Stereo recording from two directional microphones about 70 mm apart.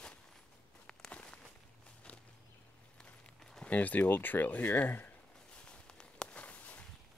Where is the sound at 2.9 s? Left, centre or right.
Centre.